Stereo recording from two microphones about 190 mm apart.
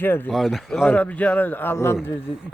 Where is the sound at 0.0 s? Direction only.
10° left (ahead or behind).